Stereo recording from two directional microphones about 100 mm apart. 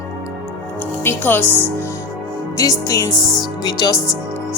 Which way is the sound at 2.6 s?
35° left (ahead or behind).